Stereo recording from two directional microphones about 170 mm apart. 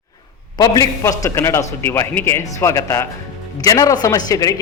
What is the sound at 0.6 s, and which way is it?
A man's voice, 20° left (ahead or behind).